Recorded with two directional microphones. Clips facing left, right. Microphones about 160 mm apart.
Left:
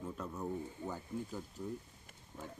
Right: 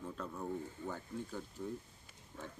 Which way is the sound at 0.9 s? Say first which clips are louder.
Left 2 dB; 10° left (ahead or behind).